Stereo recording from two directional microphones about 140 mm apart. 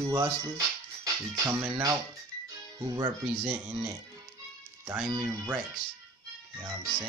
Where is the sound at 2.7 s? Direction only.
25° right (ahead or behind).